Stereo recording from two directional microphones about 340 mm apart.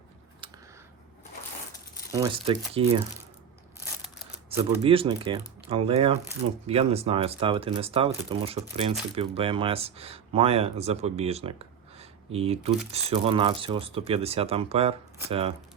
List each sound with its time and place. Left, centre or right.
0.4 s a sound: centre
2.1 s speech: centre
4.4 s speech: centre